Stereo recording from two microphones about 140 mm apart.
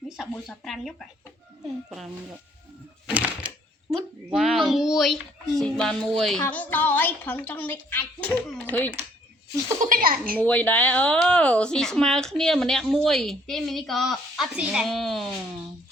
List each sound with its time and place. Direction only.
0.2 s speech: centre (ahead or behind)
3.1 s a sound: 10° right (ahead or behind)
4.3 s speech: centre (ahead or behind)
9.8 s a child's voice: 80° right
10.4 s speech: 10° left (ahead or behind)